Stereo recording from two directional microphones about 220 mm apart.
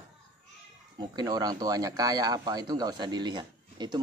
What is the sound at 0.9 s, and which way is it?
Speech, 20° right (ahead or behind).